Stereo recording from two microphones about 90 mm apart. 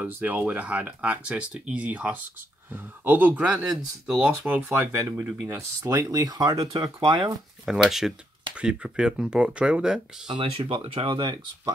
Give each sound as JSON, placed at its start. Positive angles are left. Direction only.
{"t": 0.0, "sound": "speech", "side_deg": -20}
{"t": 6.6, "sound": "speech", "side_deg": -60}
{"t": 7.6, "sound": "speech", "side_deg": -5}
{"t": 10.2, "sound": "speech", "side_deg": -70}